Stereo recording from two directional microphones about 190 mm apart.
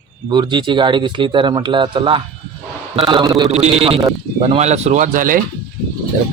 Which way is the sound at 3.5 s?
35° right (ahead or behind).